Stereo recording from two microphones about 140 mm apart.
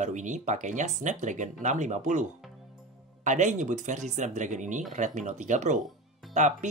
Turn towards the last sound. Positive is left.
turn(degrees=-60)  # may be behind; listen again after turning